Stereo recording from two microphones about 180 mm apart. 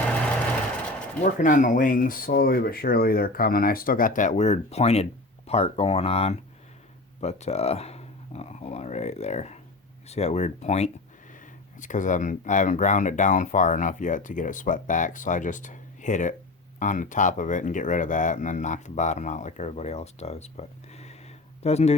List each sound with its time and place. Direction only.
1.2 s speech: 45° left (ahead or behind)